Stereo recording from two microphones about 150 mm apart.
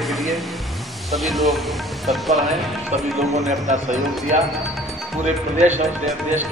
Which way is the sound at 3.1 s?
50° right (ahead or behind).